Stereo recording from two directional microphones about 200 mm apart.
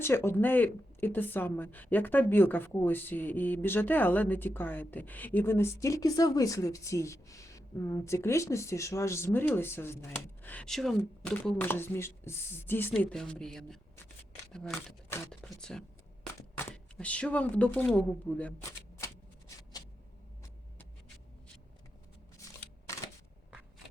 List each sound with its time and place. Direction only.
0.0 s speech: 10° left (ahead or behind)
18.9 s shuffling cards: 15° left (ahead or behind)